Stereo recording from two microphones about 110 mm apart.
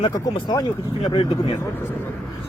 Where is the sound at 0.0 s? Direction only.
45° left (ahead or behind).